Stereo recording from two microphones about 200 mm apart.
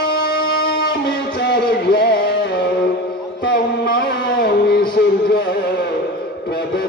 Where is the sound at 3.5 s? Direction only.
55° left (ahead or behind).